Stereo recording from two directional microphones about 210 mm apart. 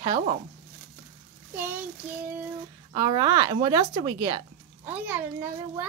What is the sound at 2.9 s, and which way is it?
A child's voice, 20° right (ahead or behind).